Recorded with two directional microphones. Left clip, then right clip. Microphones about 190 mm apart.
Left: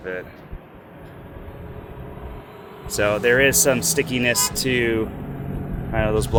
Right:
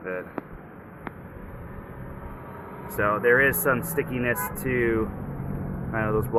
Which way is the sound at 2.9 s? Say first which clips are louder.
Left 3 dB; 50° left (ahead or behind).